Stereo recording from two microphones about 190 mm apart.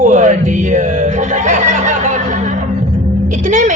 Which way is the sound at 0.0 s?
40° right (ahead or behind).